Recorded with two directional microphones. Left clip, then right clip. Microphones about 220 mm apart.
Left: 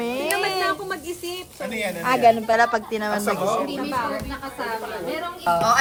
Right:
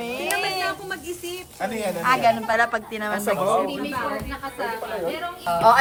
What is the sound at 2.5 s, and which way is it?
Speech, 15° left (ahead or behind).